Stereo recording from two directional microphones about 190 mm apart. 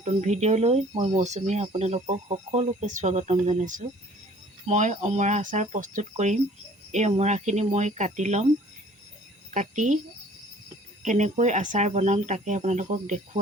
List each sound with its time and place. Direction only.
0.0 s speech: 35° right (ahead or behind)
9.5 s speech: 40° right (ahead or behind)
11.0 s speech: 40° right (ahead or behind)